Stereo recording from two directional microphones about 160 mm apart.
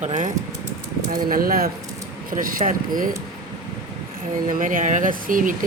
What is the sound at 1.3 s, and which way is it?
Speech, 65° right (ahead or behind).